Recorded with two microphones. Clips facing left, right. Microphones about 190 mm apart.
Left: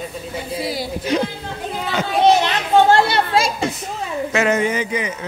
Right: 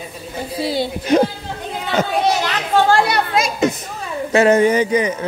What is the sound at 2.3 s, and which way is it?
Children playing, 20° left (ahead or behind).